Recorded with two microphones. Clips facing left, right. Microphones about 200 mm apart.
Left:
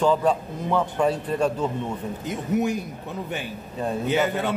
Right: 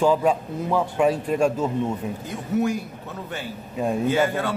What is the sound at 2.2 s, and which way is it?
Speech, 20° left (ahead or behind).